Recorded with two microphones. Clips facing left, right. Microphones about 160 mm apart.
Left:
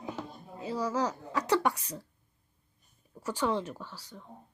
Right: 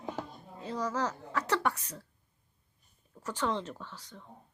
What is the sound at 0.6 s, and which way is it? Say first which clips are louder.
A woman's voice: left 2 dB; 10° left (ahead or behind).